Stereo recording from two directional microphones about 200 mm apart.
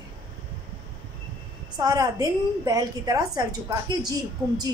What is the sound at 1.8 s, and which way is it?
A woman's voice, 20° right (ahead or behind).